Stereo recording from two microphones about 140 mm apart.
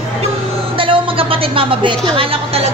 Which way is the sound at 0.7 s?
40° right (ahead or behind).